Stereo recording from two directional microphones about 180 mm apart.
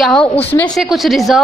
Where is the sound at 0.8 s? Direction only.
Centre (ahead or behind).